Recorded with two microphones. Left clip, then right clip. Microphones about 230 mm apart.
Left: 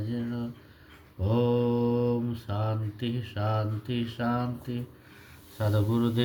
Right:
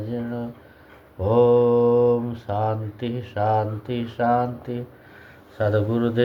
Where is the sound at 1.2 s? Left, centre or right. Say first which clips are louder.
Right 11 dB; left.